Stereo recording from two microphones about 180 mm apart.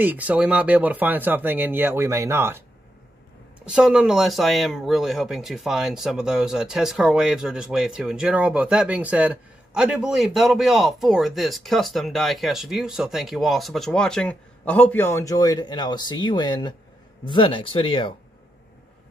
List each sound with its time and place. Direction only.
0.0 s speech: 10° right (ahead or behind)
3.6 s speech: 5° right (ahead or behind); by 18.1 s 30° left (ahead or behind)